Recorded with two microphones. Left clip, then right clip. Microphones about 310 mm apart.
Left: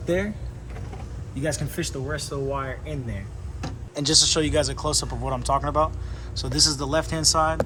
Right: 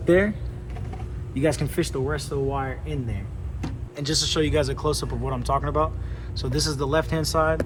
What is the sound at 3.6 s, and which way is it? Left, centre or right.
Speech, centre.